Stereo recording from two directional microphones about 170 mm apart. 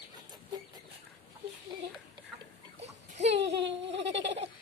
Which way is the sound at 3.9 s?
90° right.